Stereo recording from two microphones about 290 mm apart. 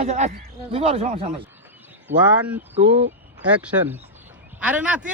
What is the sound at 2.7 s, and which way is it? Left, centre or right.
Speech, right.